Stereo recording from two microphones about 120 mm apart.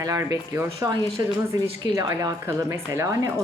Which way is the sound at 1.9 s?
30° right (ahead or behind).